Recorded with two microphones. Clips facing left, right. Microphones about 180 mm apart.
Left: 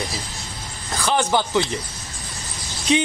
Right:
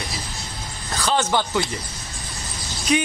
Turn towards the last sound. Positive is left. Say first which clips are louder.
# left 1 dB
turn(degrees=25)  # may be behind; listen again after turning